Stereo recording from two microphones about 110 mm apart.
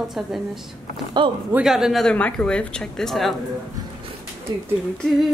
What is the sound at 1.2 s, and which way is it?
Speech, 50° right (ahead or behind).